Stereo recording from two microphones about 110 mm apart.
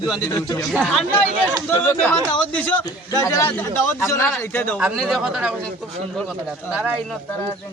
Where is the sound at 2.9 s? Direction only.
30° left (ahead or behind).